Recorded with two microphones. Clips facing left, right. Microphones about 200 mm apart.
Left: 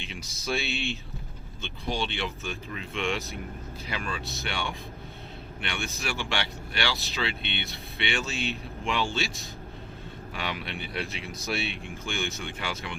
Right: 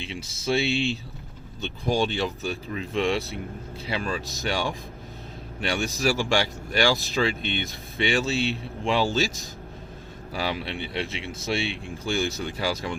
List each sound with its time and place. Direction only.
0.0 s a man's voice: 30° right (ahead or behind)
1.6 s speech: 45° right (ahead or behind)
10.3 s a man's voice: 30° right (ahead or behind)